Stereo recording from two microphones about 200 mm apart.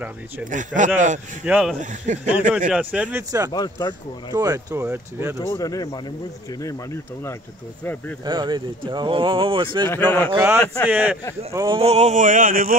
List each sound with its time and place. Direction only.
0.5 s a sound: 40° right (ahead or behind)
1.4 s speech: 5° right (ahead or behind)
1.8 s a sound: 40° right (ahead or behind)
2.7 s speech: 5° right (ahead or behind)
3.5 s speech: 20° left (ahead or behind)
4.3 s speech: 20° right (ahead or behind)
5.5 s speech: 20° left (ahead or behind)
8.3 s speech: 25° right (ahead or behind)
9.8 s speech: 10° left (ahead or behind)
10.3 s speech: 10° right (ahead or behind)
10.6 s speech: 10° left (ahead or behind)
10.9 s speech: 10° right (ahead or behind)
11.5 s speech: 20° right (ahead or behind)
11.8 s a sound: 30° right (ahead or behind)